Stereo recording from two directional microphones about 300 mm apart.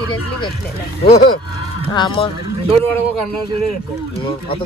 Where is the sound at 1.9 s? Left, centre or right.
Centre.